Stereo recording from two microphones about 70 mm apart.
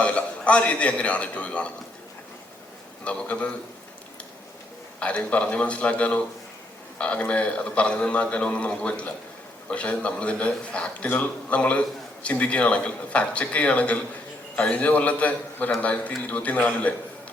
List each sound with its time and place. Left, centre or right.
0.0 s a man's voice: centre
3.0 s a man's voice: centre
4.9 s a man's voice: centre